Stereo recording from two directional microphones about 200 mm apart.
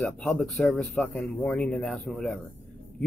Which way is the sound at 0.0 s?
5° left (ahead or behind).